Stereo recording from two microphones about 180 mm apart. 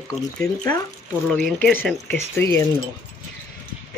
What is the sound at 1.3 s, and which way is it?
Speech, 5° left (ahead or behind).